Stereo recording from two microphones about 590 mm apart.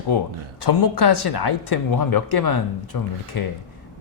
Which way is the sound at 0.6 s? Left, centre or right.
Left.